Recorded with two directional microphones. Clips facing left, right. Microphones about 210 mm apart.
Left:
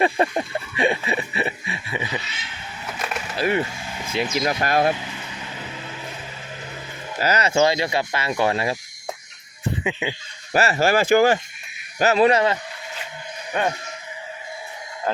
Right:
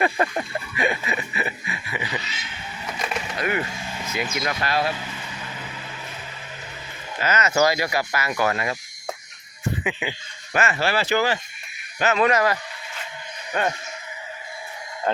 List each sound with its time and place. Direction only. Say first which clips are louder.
0.0 s a sound: left 3 dB; 25° left (ahead or behind)
3.3 s skateboard: left 5 dB; 30° left (ahead or behind)
4.0 s vehicle: left 4 dB; 30° left (ahead or behind)
4.4 s speech: left 5 dB; 45° left (ahead or behind)
7.2 s speech: left 2 dB; 35° left (ahead or behind)
7.5 s speech: left 1 dB; 25° left (ahead or behind)
9.8 s speech: left 2 dB; 25° left (ahead or behind)
10.5 s speech: left 4 dB; 35° left (ahead or behind)
11.9 s speech: left 3 dB; 35° left (ahead or behind)
13.5 s speech: left 1 dB; 5° left (ahead or behind)
15.1 s speech: right 1 dB; centre (ahead or behind)